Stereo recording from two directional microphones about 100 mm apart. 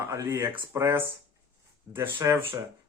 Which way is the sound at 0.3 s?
25° right (ahead or behind).